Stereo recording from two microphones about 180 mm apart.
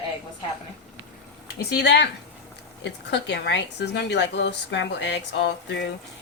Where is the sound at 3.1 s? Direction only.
75° left (ahead or behind).